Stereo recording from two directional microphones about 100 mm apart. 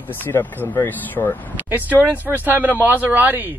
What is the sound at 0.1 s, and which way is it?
Speech, 20° left (ahead or behind).